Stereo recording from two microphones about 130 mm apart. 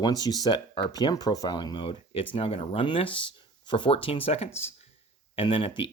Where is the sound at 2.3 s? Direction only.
45° left (ahead or behind).